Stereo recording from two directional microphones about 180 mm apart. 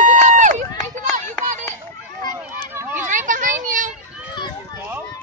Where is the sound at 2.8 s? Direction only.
10° right (ahead or behind).